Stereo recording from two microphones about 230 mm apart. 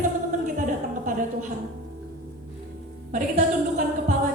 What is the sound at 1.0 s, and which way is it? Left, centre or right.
Speech, right.